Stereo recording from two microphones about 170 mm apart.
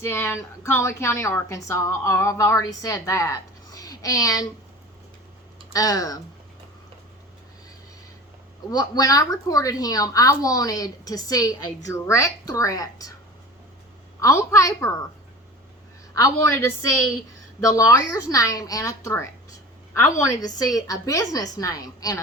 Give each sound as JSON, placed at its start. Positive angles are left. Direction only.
{"t": 0.0, "sound": "a woman's voice", "side_deg": 15}
{"t": 5.7, "sound": "a woman's voice", "side_deg": 20}
{"t": 8.7, "sound": "a woman's voice", "side_deg": 20}
{"t": 14.2, "sound": "a woman's voice", "side_deg": 15}
{"t": 16.1, "sound": "a woman's voice", "side_deg": 20}
{"t": 17.6, "sound": "a woman's voice", "side_deg": 20}